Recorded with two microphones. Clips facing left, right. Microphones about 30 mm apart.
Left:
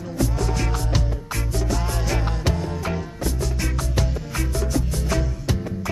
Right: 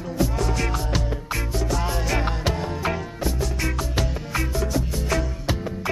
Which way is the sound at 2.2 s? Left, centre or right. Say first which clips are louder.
Right 1 dB; centre.